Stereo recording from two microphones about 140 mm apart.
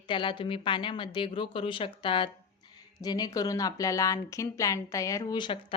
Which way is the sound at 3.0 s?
30° left (ahead or behind).